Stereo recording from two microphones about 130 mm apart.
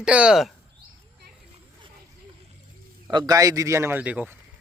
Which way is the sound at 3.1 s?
30° right (ahead or behind).